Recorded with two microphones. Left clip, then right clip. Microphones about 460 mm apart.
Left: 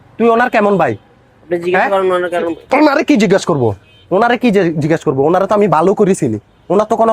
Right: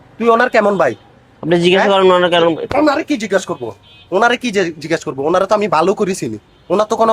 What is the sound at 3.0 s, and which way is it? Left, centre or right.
Speech, left.